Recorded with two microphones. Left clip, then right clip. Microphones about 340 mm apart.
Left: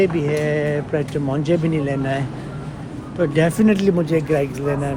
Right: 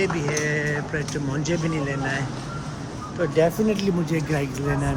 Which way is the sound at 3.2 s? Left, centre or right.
Left.